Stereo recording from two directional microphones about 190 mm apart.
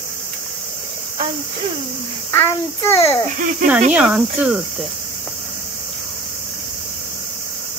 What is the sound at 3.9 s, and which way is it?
Cricket, 5° right (ahead or behind).